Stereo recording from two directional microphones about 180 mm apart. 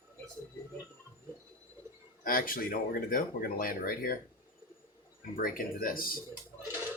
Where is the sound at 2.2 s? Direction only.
55° left (ahead or behind).